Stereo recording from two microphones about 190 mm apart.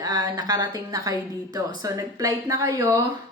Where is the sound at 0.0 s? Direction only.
20° right (ahead or behind).